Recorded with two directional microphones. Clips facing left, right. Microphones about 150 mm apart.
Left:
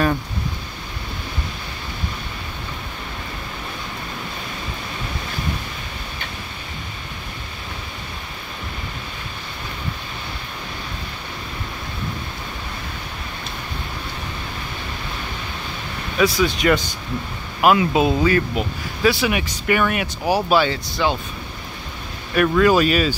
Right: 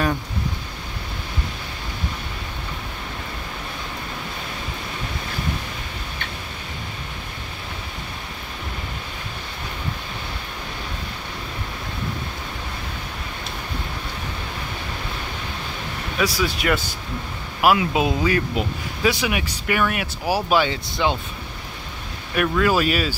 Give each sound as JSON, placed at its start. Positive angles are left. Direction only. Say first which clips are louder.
{"t": 16.2, "sound": "speech", "louder": "left 5 dB", "side_deg": -10}
{"t": 19.3, "sound": "speech", "louder": "left 3 dB", "side_deg": -5}
{"t": 22.3, "sound": "speech", "louder": "left 4 dB", "side_deg": -5}